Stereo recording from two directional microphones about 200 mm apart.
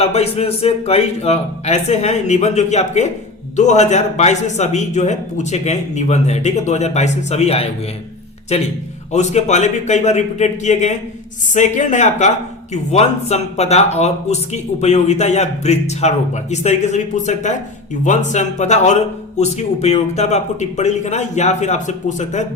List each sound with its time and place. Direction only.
0.0 s speech: 30° left (ahead or behind)